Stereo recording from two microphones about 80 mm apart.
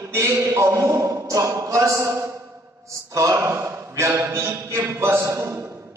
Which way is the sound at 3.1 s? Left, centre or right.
Right.